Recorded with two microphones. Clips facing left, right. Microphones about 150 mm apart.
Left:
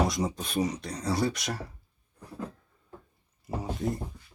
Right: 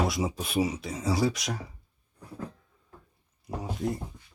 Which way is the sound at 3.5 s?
Centre (ahead or behind).